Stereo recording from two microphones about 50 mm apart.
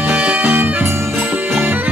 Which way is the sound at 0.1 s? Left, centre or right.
Right.